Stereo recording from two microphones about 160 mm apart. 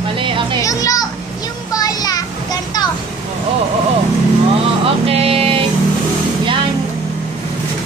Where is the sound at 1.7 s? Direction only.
25° left (ahead or behind).